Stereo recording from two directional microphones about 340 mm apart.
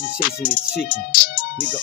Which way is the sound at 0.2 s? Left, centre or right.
Left.